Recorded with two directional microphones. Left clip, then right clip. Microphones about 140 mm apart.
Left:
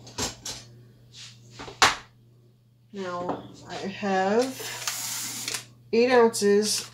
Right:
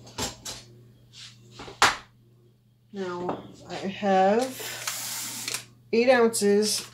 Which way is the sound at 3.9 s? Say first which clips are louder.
Right 3 dB; 55° right (ahead or behind).